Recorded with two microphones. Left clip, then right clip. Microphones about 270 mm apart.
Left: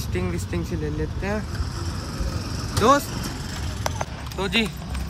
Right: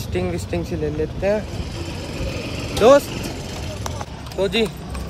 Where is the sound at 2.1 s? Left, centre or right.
Right.